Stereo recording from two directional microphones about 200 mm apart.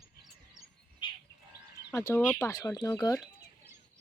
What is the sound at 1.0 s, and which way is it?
Bird, 25° left (ahead or behind).